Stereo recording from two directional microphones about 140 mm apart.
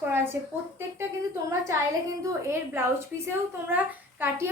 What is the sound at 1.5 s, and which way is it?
A woman's voice, 20° right (ahead or behind).